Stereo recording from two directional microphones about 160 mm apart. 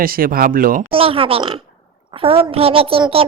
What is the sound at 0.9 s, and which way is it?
A child's voice, 35° right (ahead or behind).